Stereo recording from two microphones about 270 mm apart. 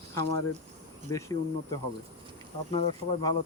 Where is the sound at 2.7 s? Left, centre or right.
Centre.